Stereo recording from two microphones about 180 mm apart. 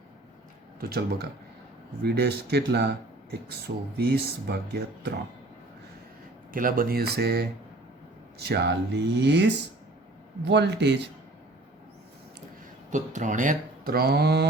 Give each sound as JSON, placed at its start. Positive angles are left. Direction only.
{"t": 0.8, "sound": "speech", "side_deg": -60}
{"t": 6.5, "sound": "speech", "side_deg": -50}
{"t": 12.9, "sound": "speech", "side_deg": -45}